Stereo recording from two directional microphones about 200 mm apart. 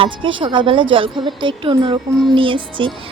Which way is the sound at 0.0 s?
25° right (ahead or behind).